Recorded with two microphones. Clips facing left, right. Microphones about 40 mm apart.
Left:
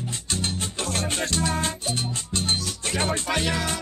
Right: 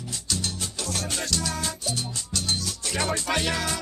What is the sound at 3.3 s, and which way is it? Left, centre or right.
Music, centre.